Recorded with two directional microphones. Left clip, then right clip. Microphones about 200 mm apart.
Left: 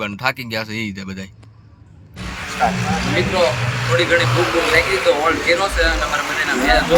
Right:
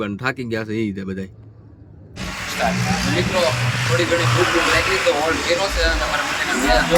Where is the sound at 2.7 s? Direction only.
45° left (ahead or behind).